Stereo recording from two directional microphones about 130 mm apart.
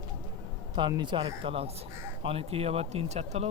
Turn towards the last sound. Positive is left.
turn(degrees=-55)  # may be behind; listen again after turning